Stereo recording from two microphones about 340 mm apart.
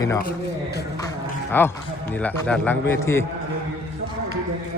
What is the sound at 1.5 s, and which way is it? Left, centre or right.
A man's voice, centre.